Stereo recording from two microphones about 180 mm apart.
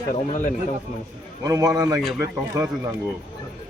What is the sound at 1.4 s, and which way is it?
A man's voice, 20° right (ahead or behind).